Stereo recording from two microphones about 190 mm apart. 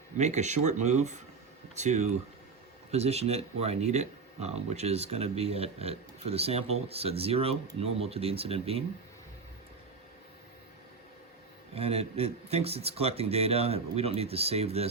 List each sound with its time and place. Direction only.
0.2 s speech: 35° right (ahead or behind)
11.7 s speech: 30° right (ahead or behind)